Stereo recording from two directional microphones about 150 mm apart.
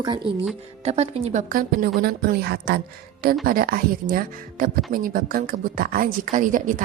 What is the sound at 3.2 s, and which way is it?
Speech, 75° right (ahead or behind).